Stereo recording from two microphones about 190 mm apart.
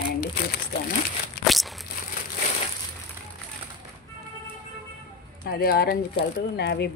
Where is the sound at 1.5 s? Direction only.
Centre (ahead or behind).